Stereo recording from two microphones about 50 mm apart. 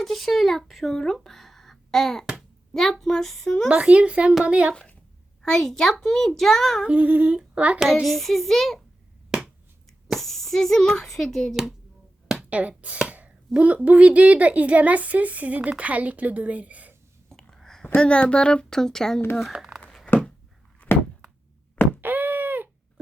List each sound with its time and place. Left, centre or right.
0.0 s speech: centre
3.7 s speech: right
5.4 s a child's voice: centre
6.8 s speech: right
8.0 s speech: centre
10.2 s a child's voice: centre
12.5 s a woman's voice: right
17.5 s a sound: centre
17.9 s a child's voice: left
19.5 s speech: right
20.1 s a sound: left
22.0 s a sound: right